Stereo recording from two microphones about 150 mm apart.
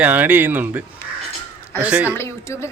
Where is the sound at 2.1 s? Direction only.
15° left (ahead or behind).